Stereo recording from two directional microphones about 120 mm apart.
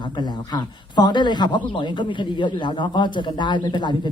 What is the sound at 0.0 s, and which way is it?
A man's voice, 40° left (ahead or behind).